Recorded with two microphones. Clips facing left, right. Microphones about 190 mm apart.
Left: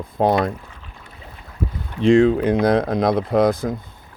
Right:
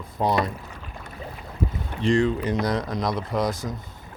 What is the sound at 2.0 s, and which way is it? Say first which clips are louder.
Speech: left 8 dB; 75° left (ahead or behind).